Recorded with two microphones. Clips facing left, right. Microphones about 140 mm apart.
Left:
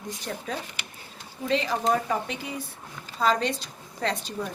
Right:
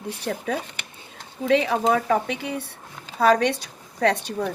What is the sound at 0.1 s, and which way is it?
A woman's voice, 70° right (ahead or behind).